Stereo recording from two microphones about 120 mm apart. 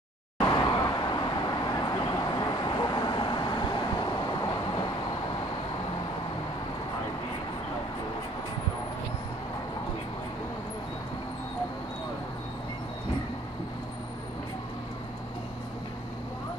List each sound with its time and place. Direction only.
0.4 s vehicle: 35° left (ahead or behind)